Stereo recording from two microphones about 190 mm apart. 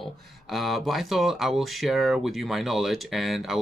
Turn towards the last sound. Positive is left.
turn(degrees=0)  # may be behind; listen again after turning